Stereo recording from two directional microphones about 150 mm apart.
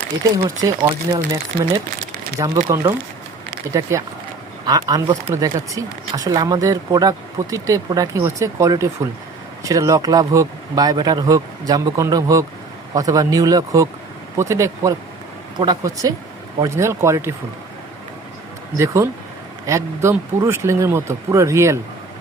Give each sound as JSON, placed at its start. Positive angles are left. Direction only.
{"t": 0.4, "sound": "speech", "side_deg": -25}
{"t": 3.7, "sound": "speech", "side_deg": -20}
{"t": 19.6, "sound": "speech", "side_deg": -20}